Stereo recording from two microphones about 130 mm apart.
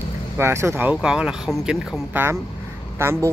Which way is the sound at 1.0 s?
5° right (ahead or behind).